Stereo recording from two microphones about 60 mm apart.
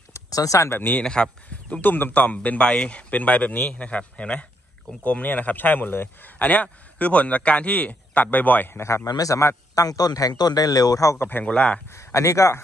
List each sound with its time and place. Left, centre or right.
0.1 s a sound: left
0.7 s speech: left
1.0 s speech: centre
1.8 s a man's voice: left
8.7 s speech: left
9.0 s a man's voice: left
9.8 s a man's voice: left
11.1 s speech: left
11.4 s speech: centre
11.9 s speech: left